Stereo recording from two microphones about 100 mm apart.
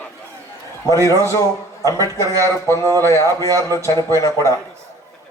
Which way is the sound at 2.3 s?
35° right (ahead or behind).